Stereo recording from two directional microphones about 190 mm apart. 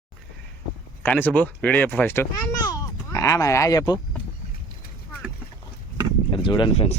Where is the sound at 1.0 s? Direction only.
10° left (ahead or behind).